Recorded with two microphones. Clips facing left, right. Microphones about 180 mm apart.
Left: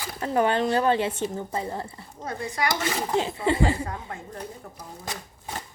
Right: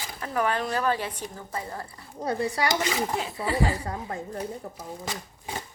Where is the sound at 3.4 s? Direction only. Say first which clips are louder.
Left 1 dB; 25° left (ahead or behind).